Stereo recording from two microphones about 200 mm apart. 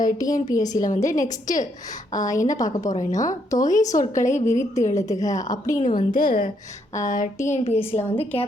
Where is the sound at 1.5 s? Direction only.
40° left (ahead or behind).